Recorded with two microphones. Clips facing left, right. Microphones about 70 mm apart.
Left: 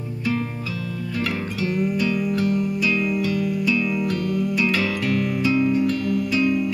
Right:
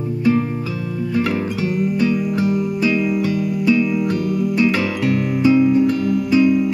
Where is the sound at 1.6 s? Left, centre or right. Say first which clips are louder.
Right 2 dB; right.